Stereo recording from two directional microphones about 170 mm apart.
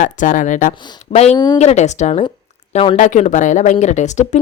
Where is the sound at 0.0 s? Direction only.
50° left (ahead or behind).